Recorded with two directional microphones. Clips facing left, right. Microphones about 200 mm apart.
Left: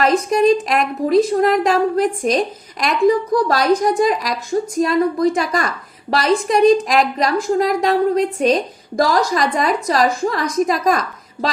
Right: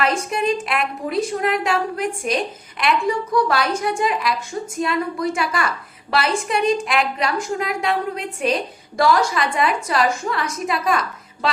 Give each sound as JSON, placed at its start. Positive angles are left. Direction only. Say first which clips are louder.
{"t": 0.0, "sound": "a woman's voice", "louder": "left 7 dB", "side_deg": 40}